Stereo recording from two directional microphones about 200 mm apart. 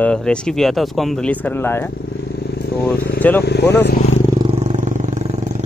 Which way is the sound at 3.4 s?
55° left (ahead or behind).